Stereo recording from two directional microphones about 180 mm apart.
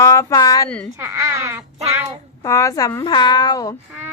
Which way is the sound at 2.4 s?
15° left (ahead or behind).